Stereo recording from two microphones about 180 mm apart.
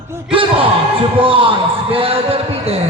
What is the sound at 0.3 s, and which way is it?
Speech, 30° right (ahead or behind).